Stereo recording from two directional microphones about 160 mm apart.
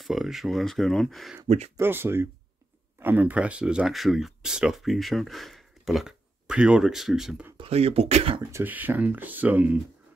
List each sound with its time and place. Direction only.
0.0 s speech: centre (ahead or behind)
1.8 s speech: 15° right (ahead or behind)
7.5 s speech: 35° right (ahead or behind)
8.4 s speech: 15° right (ahead or behind)